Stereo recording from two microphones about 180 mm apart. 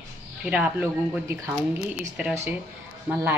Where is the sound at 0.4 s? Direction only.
5° right (ahead or behind).